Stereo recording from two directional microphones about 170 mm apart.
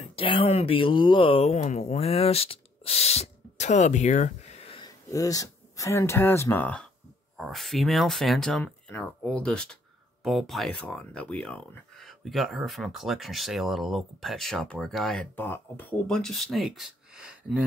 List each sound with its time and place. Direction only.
0.1 s speech: 30° left (ahead or behind)
4.8 s speech: 20° left (ahead or behind); by 17.6 s 5° right (ahead or behind)